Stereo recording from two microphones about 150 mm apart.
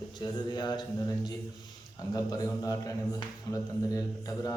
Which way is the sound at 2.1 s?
25° left (ahead or behind).